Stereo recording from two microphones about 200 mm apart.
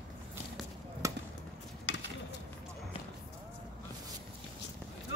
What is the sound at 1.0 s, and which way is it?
Basketball bounce, 15° right (ahead or behind).